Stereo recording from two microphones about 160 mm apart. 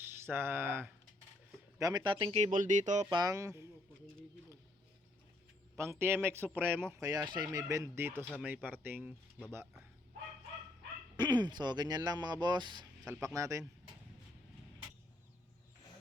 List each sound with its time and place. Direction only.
0.0 s speech: 15° right (ahead or behind)
1.8 s speech: 25° right (ahead or behind)
2.4 s speech: 50° right (ahead or behind)
3.1 s speech: 25° right (ahead or behind)
5.7 s speech: 15° right (ahead or behind)
11.2 s speech: 25° right (ahead or behind)